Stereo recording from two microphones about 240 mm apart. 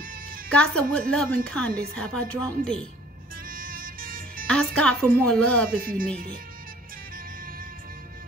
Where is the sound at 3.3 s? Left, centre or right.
Right.